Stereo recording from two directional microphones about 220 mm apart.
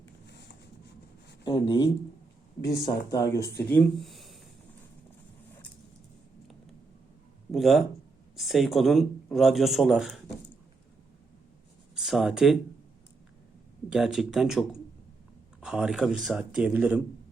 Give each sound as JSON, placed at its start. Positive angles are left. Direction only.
{"t": 1.5, "sound": "speech", "side_deg": 20}
{"t": 7.5, "sound": "speech", "side_deg": 0}
{"t": 11.9, "sound": "speech", "side_deg": 0}
{"t": 13.9, "sound": "speech", "side_deg": 0}